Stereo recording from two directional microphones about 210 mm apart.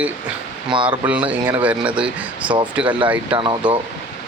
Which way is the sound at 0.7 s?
25° right (ahead or behind).